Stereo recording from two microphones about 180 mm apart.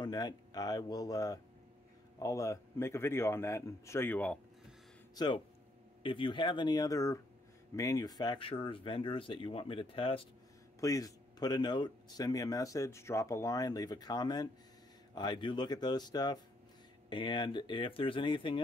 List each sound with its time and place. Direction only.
0.0 s a man's voice: 20° left (ahead or behind)
5.1 s speech: 25° left (ahead or behind)
10.8 s speech: 20° left (ahead or behind)